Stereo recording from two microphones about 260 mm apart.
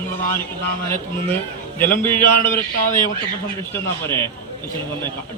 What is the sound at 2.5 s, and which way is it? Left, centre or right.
Speech, left.